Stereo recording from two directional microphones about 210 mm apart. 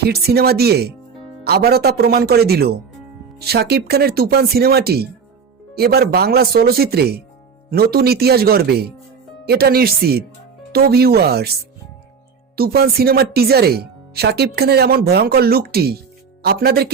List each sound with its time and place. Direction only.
0.0 s speech: 50° right (ahead or behind)
12.5 s speech: 45° right (ahead or behind)